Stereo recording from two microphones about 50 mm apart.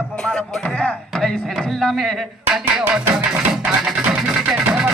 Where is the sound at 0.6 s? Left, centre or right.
Left.